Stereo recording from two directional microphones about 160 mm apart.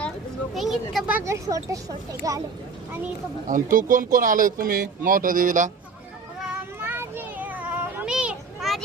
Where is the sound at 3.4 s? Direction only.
55° right (ahead or behind).